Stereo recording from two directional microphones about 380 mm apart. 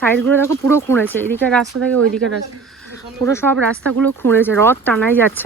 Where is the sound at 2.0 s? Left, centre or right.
Right.